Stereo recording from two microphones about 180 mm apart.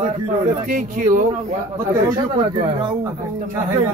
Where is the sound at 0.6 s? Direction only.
50° right (ahead or behind).